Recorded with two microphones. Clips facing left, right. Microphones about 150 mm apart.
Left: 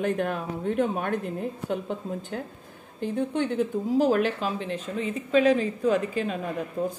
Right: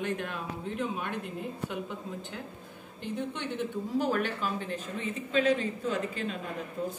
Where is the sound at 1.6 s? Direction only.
40° left (ahead or behind).